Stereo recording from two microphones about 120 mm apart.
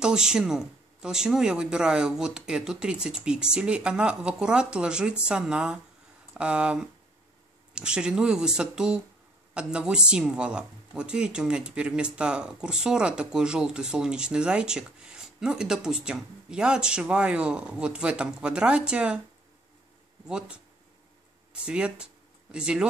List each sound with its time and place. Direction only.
0.0 s speech: 5° right (ahead or behind)
20.2 s speech: 5° right (ahead or behind)
21.5 s speech: 10° right (ahead or behind)